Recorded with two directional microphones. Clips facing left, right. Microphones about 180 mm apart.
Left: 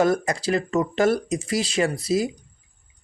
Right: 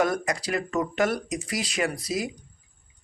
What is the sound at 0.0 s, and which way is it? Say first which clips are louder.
Speech: left 4 dB; 30° left (ahead or behind).